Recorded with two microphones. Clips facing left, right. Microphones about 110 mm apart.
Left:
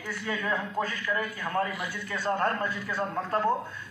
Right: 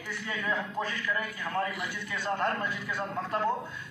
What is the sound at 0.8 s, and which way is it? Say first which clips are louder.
A man's voice: left 2 dB; 40° left (ahead or behind).